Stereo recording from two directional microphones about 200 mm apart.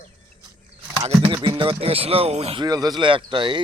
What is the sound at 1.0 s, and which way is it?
Speech, 25° right (ahead or behind).